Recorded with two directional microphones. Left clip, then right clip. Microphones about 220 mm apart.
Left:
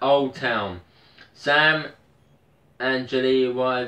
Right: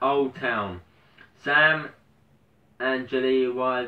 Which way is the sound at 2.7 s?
5° left (ahead or behind).